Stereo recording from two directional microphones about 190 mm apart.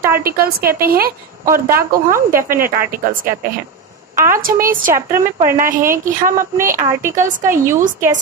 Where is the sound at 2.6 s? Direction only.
50° right (ahead or behind).